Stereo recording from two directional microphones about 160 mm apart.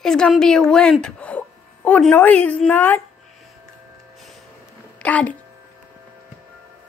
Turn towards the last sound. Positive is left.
turn(degrees=10)  # may be behind; listen again after turning